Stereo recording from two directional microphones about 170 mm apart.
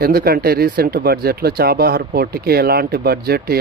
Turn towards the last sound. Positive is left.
turn(degrees=-70)  # may be behind; listen again after turning